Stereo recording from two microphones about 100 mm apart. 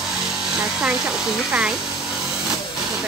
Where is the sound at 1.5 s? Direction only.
10° right (ahead or behind).